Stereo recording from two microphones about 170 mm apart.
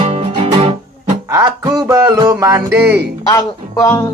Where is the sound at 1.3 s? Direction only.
20° right (ahead or behind).